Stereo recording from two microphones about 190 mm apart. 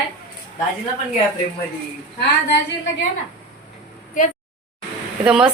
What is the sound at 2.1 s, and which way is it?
Speech, 60° left (ahead or behind).